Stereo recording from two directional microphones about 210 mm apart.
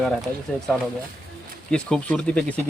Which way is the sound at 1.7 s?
5° left (ahead or behind).